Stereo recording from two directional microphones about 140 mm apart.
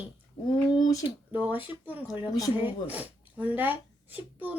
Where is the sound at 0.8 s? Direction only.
25° left (ahead or behind).